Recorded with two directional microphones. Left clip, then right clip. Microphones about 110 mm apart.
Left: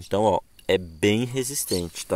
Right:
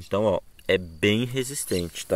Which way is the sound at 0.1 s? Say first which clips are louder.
Left 2 dB; 30° left (ahead or behind).